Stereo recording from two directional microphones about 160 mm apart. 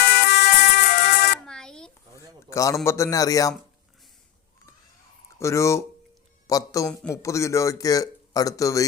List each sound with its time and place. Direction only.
0.0 s music: 70° left (ahead or behind)
1.5 s a sound: 5° left (ahead or behind)
2.1 s a man's voice: 20° left (ahead or behind)
5.4 s speech: 20° left (ahead or behind)